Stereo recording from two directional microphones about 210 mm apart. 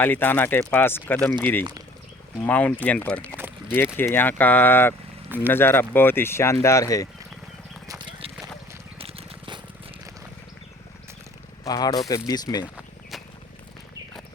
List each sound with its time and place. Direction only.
0.0 s speech: 10° left (ahead or behind)
7.9 s clip-clop: 20° right (ahead or behind)
9.0 s a sound: 25° right (ahead or behind)
11.6 s speech: 20° left (ahead or behind)
12.7 s walk: centre (ahead or behind)